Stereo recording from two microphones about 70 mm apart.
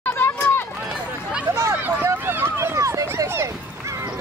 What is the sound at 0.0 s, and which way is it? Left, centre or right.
Run, left.